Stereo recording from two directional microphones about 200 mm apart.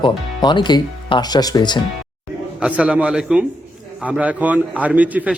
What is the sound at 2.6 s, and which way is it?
A man's voice, 5° right (ahead or behind).